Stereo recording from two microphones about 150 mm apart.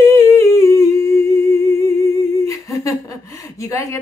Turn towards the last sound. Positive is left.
turn(degrees=20)  # may be behind; listen again after turning